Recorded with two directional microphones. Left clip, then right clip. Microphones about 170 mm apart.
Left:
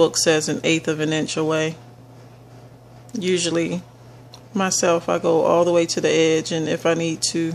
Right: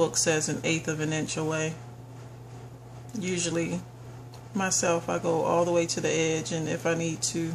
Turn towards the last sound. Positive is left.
turn(degrees=40)  # may be behind; listen again after turning